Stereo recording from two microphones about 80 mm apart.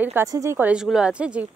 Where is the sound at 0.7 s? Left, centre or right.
Centre.